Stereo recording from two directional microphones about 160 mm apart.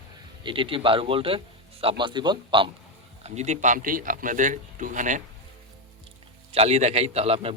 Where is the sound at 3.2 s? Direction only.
45° right (ahead or behind).